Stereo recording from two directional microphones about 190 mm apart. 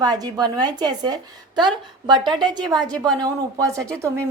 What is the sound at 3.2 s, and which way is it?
Speech, 20° right (ahead or behind).